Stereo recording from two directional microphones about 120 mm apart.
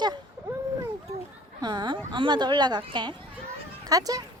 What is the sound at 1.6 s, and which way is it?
A woman's voice, 35° right (ahead or behind).